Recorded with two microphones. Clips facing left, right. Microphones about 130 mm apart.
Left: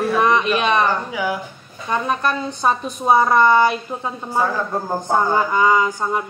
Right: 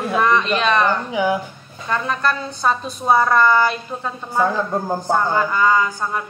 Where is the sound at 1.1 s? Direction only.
25° right (ahead or behind).